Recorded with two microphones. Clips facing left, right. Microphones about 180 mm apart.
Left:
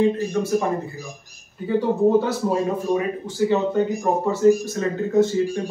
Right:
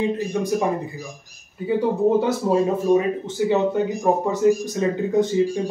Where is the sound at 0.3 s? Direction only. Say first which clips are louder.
Left 1 dB; 15° right (ahead or behind).